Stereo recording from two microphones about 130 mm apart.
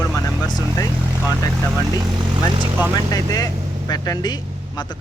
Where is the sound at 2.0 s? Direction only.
35° right (ahead or behind).